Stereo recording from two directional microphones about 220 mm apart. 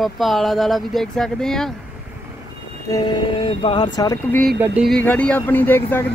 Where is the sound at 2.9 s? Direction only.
20° left (ahead or behind).